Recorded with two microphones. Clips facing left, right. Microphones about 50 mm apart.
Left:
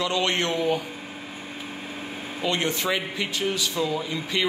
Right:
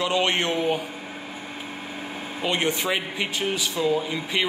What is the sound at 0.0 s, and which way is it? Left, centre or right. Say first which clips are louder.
Speech: right 1 dB; right.